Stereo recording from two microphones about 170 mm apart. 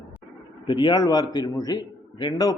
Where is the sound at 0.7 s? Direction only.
30° left (ahead or behind).